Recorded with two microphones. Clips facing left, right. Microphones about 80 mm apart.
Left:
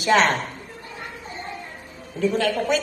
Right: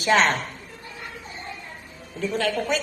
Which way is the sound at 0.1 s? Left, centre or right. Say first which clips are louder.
Left 1 dB; left.